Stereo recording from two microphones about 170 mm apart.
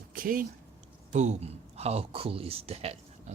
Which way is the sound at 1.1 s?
45° right (ahead or behind).